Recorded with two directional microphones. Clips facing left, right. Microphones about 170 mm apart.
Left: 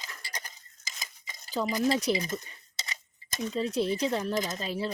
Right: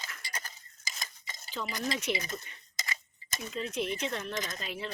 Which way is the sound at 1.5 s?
35° left (ahead or behind).